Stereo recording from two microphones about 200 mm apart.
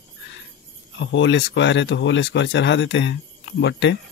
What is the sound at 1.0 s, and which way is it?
Speech, 65° left (ahead or behind).